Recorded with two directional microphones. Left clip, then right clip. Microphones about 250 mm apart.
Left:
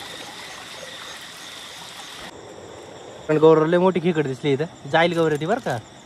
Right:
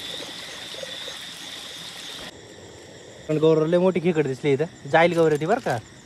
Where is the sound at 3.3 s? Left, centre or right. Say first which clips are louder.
Left 4 dB; left.